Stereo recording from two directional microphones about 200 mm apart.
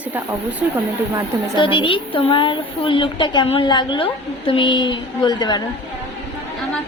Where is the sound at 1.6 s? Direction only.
25° left (ahead or behind).